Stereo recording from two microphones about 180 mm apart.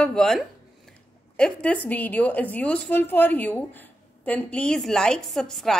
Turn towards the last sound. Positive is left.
turn(degrees=0)  # may be behind; listen again after turning